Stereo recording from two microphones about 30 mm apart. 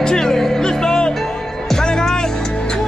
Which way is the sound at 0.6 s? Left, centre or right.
Left.